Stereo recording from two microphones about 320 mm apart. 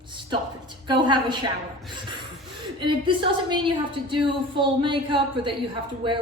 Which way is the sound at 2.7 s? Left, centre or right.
Centre.